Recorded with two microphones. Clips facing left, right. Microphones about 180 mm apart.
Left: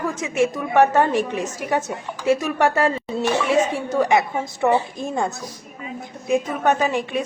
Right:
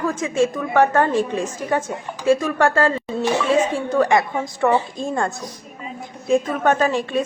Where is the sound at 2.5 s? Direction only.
20° left (ahead or behind).